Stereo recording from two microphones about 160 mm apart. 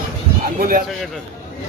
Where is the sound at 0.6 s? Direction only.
60° right (ahead or behind).